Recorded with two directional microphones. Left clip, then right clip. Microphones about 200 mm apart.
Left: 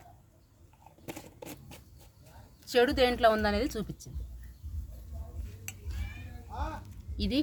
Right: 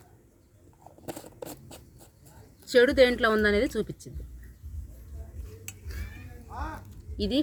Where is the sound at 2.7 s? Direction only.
30° left (ahead or behind).